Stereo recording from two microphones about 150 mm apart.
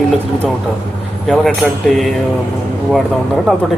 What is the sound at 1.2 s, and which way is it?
Speech, centre (ahead or behind).